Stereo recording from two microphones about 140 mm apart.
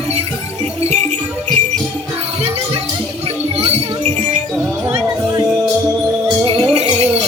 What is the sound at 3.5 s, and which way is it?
Music, 45° right (ahead or behind).